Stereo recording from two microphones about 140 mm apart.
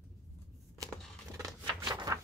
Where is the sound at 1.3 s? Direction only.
20° right (ahead or behind).